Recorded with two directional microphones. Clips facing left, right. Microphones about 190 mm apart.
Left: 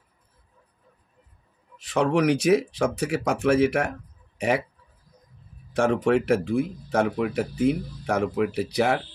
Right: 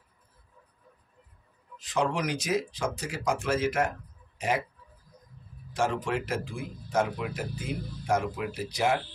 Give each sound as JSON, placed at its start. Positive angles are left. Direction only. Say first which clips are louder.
{"t": 1.8, "sound": "speech", "louder": "left 7 dB", "side_deg": 65}
{"t": 5.7, "sound": "speech", "louder": "left 8 dB", "side_deg": 60}